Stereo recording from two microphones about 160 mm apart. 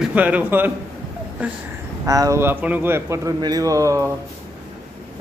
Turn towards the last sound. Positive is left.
turn(degrees=-20)  # may be behind; listen again after turning